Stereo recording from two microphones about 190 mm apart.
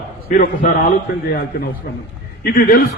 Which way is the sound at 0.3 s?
45° left (ahead or behind).